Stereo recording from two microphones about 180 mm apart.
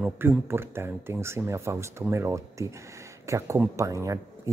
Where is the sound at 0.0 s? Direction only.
10° right (ahead or behind).